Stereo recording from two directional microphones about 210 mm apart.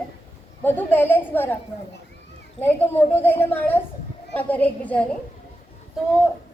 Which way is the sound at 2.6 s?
10° left (ahead or behind).